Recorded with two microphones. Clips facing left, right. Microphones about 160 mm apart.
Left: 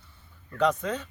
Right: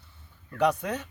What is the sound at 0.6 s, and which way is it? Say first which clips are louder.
Speech: even; 10° right (ahead or behind).